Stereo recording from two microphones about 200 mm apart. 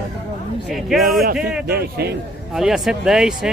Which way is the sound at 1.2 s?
50° right (ahead or behind).